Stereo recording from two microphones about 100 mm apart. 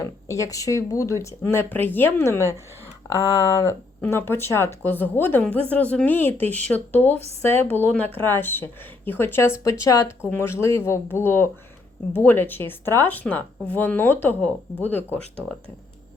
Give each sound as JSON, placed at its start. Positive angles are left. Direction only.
{"t": 0.3, "sound": "a woman's voice", "side_deg": 35}
{"t": 4.0, "sound": "a woman's voice", "side_deg": 25}
{"t": 10.2, "sound": "a woman's voice", "side_deg": 20}